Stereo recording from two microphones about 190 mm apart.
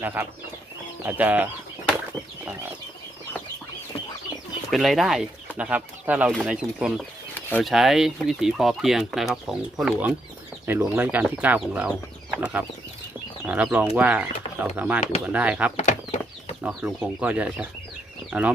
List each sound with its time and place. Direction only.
0.0 s speech: 10° right (ahead or behind)
4.7 s speech: centre (ahead or behind)
7.3 s a sound: 10° left (ahead or behind)
7.7 s speech: centre (ahead or behind)
15.7 s a sound: 35° left (ahead or behind)
16.6 s speech: 5° right (ahead or behind)